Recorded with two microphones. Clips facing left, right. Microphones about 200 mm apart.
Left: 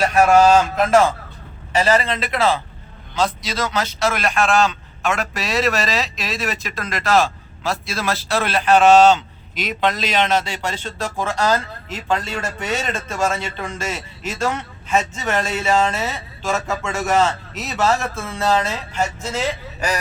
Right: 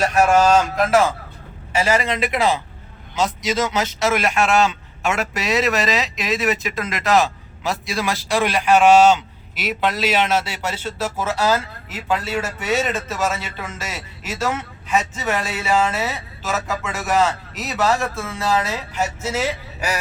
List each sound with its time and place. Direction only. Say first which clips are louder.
1.7 s speech: left 2 dB; 10° right (ahead or behind)